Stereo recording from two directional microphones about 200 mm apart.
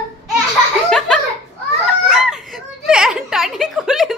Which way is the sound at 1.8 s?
5° right (ahead or behind).